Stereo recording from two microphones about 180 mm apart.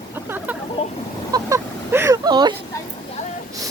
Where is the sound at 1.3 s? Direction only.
15° right (ahead or behind).